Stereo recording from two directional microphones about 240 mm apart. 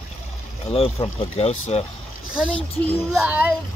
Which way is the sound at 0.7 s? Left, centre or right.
Centre.